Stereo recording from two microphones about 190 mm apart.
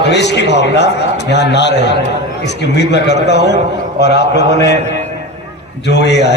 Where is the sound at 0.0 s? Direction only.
65° left (ahead or behind).